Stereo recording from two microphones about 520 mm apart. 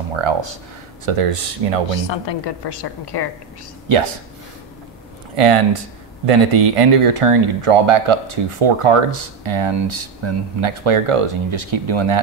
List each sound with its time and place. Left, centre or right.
0.1 s speech: right
1.0 s speech: right
2.0 s a woman's voice: left
5.3 s speech: right